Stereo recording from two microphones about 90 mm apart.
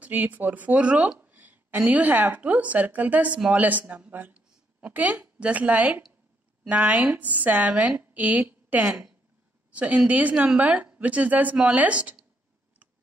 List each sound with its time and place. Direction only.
0.0 s a woman's voice: 20° right (ahead or behind)
8.8 s a woman's voice: 5° right (ahead or behind)